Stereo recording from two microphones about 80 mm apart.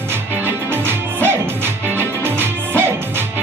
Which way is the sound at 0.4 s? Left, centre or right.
Right.